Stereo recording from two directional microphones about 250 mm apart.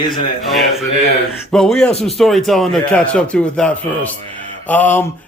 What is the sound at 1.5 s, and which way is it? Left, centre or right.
A man's voice, centre.